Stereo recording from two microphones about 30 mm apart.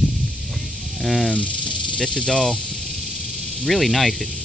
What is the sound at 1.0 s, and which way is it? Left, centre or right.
Speech, centre.